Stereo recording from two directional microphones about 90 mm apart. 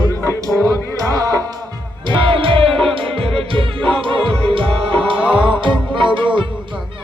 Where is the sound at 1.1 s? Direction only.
40° right (ahead or behind).